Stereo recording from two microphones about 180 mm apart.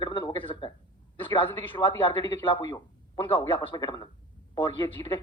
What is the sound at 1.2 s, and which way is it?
Speech, 25° left (ahead or behind).